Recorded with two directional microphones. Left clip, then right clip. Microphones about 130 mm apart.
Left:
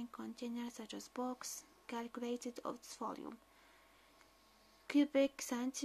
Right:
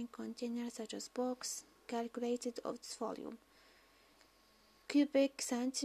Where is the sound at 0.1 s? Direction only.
25° right (ahead or behind).